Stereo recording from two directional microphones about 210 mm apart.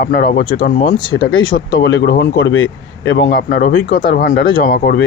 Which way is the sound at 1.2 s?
65° left (ahead or behind).